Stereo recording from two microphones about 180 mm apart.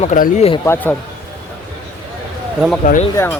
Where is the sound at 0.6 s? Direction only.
10° left (ahead or behind).